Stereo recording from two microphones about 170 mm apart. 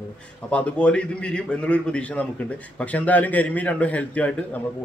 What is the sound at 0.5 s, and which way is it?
A man's voice, 5° left (ahead or behind).